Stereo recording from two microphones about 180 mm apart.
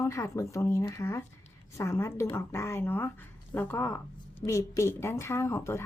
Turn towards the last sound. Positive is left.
turn(degrees=15)  # may be behind; listen again after turning